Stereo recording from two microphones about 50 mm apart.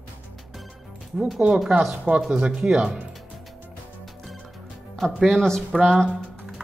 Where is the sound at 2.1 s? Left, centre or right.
Right.